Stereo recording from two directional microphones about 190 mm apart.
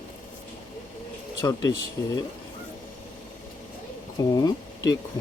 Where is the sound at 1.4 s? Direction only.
20° left (ahead or behind).